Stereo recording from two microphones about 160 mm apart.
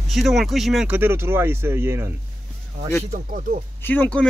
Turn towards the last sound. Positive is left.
turn(degrees=10)  # may be behind; listen again after turning